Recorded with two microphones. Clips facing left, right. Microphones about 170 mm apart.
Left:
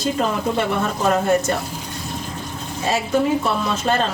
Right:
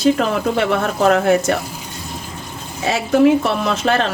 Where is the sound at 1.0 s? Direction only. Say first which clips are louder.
Right 4 dB; 75° right (ahead or behind).